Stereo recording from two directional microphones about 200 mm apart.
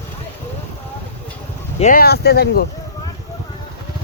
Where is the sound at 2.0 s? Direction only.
50° left (ahead or behind).